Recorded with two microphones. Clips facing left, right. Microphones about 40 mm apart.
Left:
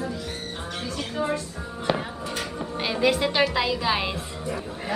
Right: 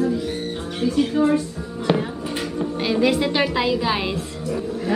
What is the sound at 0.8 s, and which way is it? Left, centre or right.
Speech, centre.